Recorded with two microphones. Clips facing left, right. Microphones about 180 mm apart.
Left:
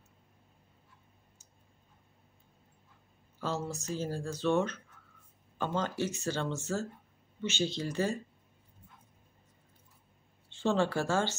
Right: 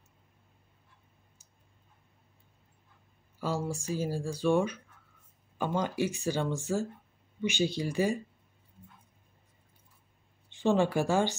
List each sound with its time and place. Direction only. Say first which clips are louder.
3.3 s speech: right 3 dB; 10° right (ahead or behind)
10.5 s speech: right 3 dB; 15° right (ahead or behind)